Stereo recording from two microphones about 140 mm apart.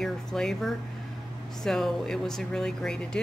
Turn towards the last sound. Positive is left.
turn(degrees=5)  # may be behind; listen again after turning